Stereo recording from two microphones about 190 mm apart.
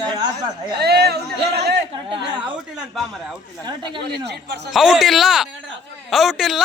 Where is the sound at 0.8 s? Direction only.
60° right (ahead or behind).